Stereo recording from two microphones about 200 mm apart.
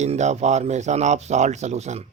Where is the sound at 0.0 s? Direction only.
35° right (ahead or behind).